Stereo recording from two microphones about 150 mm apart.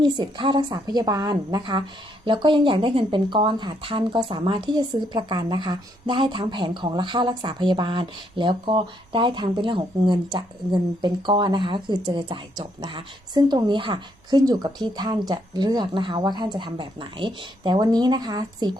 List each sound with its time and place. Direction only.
0.0 s a woman's voice: 30° right (ahead or behind)